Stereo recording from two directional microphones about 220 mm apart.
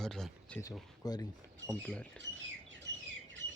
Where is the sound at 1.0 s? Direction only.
15° left (ahead or behind).